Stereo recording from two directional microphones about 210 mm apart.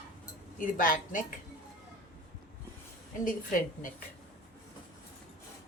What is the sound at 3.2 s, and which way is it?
Speech, 40° left (ahead or behind).